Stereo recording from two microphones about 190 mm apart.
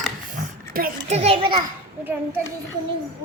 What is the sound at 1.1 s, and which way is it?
Speech, 30° right (ahead or behind).